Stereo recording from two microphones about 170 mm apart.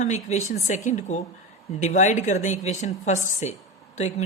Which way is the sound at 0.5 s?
45° left (ahead or behind).